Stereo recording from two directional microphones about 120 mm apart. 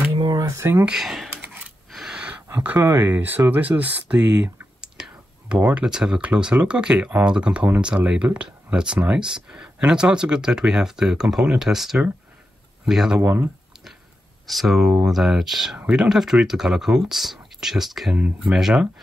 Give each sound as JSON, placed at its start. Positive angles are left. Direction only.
{"t": 0.2, "sound": "a sound", "side_deg": -35}
{"t": 0.8, "sound": "speech", "side_deg": -5}
{"t": 13.2, "sound": "speech", "side_deg": -20}
{"t": 14.5, "sound": "speech", "side_deg": 0}